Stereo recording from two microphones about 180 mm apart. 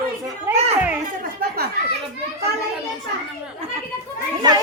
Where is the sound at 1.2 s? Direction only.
55° right (ahead or behind).